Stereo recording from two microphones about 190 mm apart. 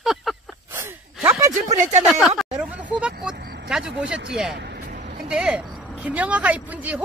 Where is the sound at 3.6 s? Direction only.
5° right (ahead or behind).